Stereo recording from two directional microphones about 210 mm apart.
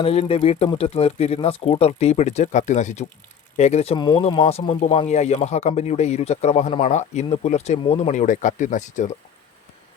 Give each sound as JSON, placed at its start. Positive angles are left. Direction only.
{"t": 0.0, "sound": "speech", "side_deg": 30}